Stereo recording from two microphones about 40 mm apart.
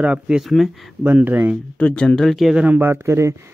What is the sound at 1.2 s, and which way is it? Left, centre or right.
Speech, right.